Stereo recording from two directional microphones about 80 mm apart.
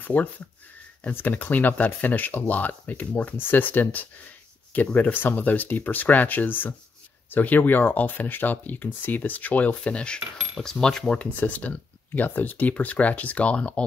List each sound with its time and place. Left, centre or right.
0.0 s speech: left
10.5 s cutlery: centre
11.3 s speech: centre